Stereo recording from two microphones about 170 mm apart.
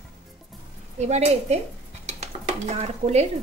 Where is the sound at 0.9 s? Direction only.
40° right (ahead or behind).